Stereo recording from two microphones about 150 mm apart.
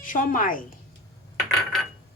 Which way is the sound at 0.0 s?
65° left (ahead or behind).